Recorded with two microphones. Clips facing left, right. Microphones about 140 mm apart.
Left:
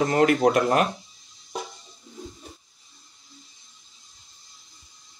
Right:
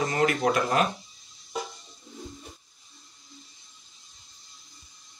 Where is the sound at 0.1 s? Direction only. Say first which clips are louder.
Left 6 dB; 55° left (ahead or behind).